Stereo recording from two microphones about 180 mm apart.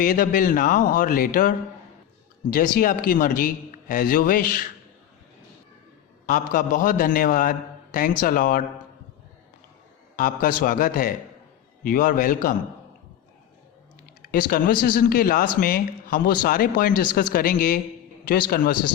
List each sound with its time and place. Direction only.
0.0 s a man's voice: 50° left (ahead or behind)
6.2 s a man's voice: 45° left (ahead or behind)
10.2 s a man's voice: 50° left (ahead or behind)
14.2 s a man's voice: 55° left (ahead or behind)